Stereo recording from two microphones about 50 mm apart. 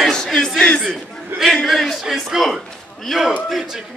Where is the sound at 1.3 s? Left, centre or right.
Right.